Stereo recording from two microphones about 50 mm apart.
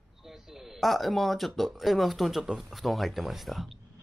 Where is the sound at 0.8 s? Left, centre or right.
Centre.